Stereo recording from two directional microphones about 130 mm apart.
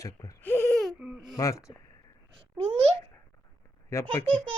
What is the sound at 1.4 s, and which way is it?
Speech, 25° left (ahead or behind).